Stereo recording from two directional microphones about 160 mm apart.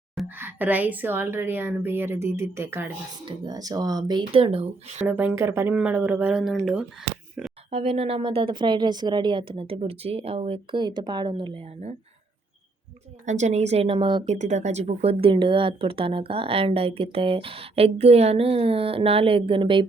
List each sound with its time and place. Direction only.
0.3 s a woman's voice: 10° right (ahead or behind)
3.2 s speech: 25° right (ahead or behind)
5.0 s a woman's voice: 10° right (ahead or behind)
7.7 s speech: 40° right (ahead or behind)
13.2 s speech: 50° right (ahead or behind); by 14.3 s 30° right (ahead or behind)
14.3 s speech: 45° right (ahead or behind); by 19.8 s 30° right (ahead or behind)